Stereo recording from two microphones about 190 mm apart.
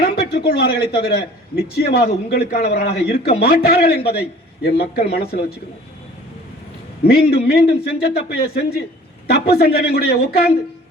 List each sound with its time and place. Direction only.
0.0 s a man's voice: 60° left (ahead or behind)
7.0 s a man's voice: 55° left (ahead or behind)